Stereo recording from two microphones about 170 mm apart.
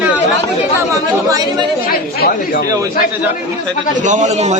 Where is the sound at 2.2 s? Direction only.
65° left (ahead or behind).